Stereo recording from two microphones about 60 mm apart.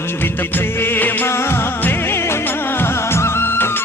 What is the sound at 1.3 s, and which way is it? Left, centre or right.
Music, left.